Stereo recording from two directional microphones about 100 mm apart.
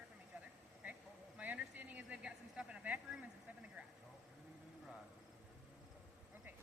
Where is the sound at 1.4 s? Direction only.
15° right (ahead or behind).